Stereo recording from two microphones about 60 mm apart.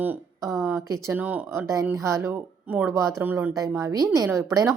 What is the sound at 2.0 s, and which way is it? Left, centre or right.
Speech, right.